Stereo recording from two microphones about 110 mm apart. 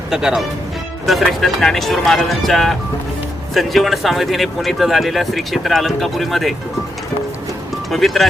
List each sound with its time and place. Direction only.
0.1 s speech: 5° right (ahead or behind)
7.9 s speech: centre (ahead or behind)